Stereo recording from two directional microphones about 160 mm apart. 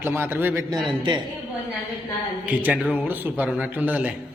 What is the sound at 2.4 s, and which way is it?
A man's voice, 10° right (ahead or behind).